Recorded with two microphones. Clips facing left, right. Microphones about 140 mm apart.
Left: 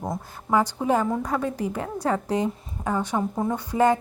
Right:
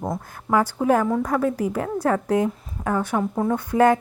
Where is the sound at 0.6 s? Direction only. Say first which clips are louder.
Right 3 dB; 15° left (ahead or behind).